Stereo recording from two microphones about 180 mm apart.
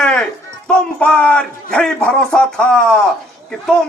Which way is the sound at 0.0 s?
5° left (ahead or behind).